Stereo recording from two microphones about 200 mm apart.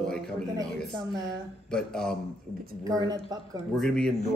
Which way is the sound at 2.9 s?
20° right (ahead or behind).